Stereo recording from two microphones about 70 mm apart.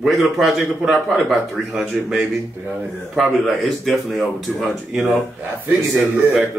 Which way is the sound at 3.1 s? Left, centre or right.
Centre.